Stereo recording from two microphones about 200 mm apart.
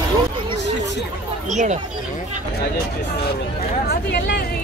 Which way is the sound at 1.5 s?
35° right (ahead or behind).